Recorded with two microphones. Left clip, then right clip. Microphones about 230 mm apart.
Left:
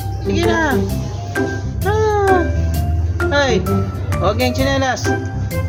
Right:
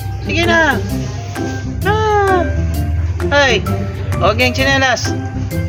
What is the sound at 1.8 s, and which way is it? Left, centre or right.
Music, centre.